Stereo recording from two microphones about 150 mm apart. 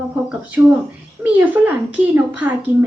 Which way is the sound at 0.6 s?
5° right (ahead or behind).